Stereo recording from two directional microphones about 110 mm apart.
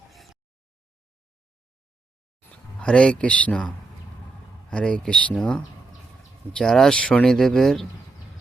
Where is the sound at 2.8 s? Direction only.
10° left (ahead or behind).